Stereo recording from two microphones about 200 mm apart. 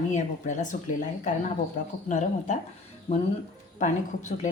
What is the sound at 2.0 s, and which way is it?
Speech, 35° left (ahead or behind).